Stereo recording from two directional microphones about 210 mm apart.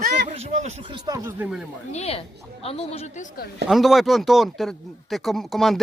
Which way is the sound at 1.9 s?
30° left (ahead or behind).